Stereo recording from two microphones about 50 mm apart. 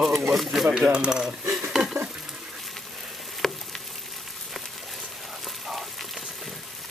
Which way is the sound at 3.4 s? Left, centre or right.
Centre.